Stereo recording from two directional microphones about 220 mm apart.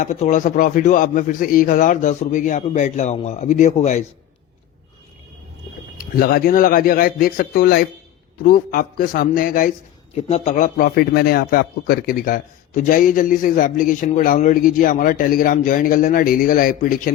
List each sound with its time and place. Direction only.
0.0 s a man's voice: 35° left (ahead or behind)
6.0 s a man's voice: 40° left (ahead or behind)